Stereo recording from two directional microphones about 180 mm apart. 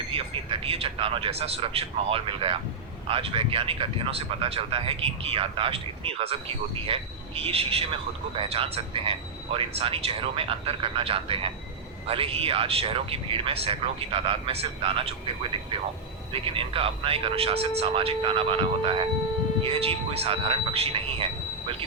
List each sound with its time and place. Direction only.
0.1 s speech: 30° right (ahead or behind)